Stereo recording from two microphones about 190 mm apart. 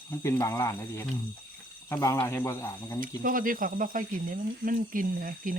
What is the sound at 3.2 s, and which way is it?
Speech, 45° right (ahead or behind).